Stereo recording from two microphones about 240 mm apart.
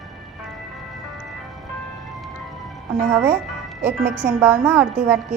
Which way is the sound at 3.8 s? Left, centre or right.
Centre.